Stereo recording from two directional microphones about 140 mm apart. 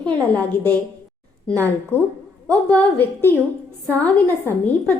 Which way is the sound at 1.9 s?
15° left (ahead or behind).